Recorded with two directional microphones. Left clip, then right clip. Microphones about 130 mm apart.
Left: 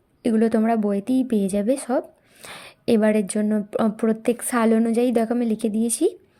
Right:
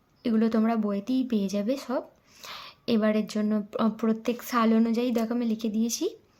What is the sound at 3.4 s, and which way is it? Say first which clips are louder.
A woman's voice: left 5 dB; 40° left (ahead or behind).